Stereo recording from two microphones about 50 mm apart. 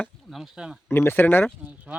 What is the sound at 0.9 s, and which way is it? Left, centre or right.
Speech, left.